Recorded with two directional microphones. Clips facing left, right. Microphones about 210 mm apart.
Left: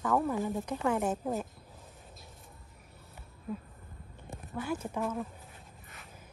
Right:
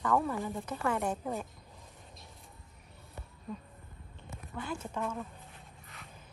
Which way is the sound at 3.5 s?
5° left (ahead or behind).